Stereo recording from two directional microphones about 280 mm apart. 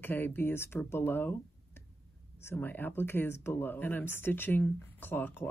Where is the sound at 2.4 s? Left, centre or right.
Centre.